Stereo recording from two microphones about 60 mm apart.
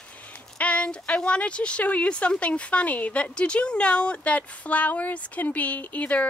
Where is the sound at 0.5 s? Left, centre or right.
Left.